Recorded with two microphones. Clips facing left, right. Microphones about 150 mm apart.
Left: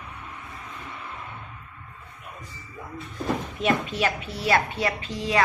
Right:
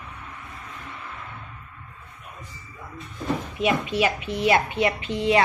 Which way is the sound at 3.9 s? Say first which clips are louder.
Right 4 dB; 15° right (ahead or behind).